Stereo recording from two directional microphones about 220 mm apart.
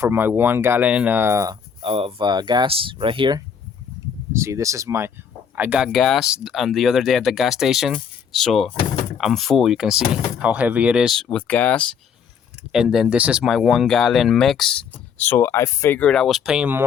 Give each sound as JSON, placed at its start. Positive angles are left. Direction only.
{"t": 0.0, "sound": "speech", "side_deg": -10}